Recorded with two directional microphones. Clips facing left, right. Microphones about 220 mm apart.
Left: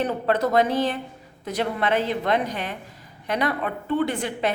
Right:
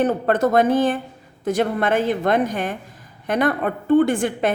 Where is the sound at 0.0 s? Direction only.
50° right (ahead or behind).